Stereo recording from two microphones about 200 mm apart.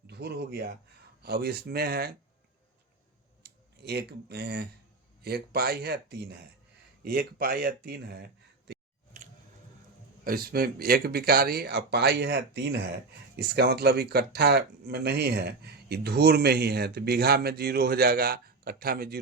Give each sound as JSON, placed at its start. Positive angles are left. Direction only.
{"t": 0.1, "sound": "speech", "side_deg": -55}
{"t": 3.4, "sound": "speech", "side_deg": -55}
{"t": 10.2, "sound": "speech", "side_deg": -50}